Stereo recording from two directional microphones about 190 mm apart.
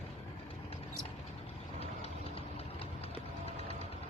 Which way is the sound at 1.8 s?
30° left (ahead or behind).